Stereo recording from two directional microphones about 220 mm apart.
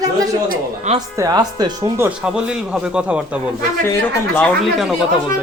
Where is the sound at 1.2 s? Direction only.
15° right (ahead or behind).